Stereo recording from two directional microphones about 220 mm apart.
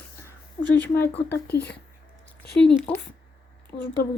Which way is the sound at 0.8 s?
10° left (ahead or behind).